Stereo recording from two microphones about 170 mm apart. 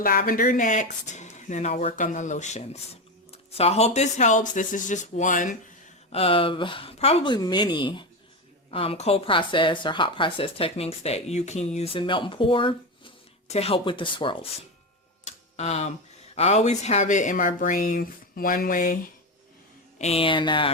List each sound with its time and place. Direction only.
0.0 s speech: 60° left (ahead or behind)
6.1 s speech: 35° left (ahead or behind)
15.2 s a sound: 40° left (ahead or behind)
16.3 s speech: 40° left (ahead or behind)
20.0 s speech: 35° left (ahead or behind)